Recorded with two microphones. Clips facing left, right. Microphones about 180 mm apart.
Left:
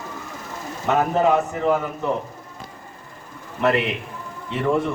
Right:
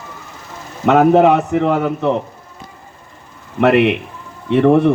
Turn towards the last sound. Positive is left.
turn(degrees=-65)  # may be behind; listen again after turning